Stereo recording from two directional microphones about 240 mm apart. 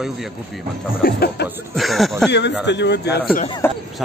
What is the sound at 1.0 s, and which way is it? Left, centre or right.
Speech, left.